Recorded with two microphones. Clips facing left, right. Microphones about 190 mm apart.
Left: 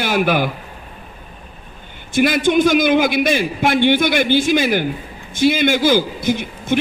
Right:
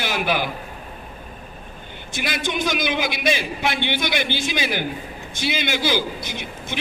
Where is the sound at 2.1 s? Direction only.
50° left (ahead or behind).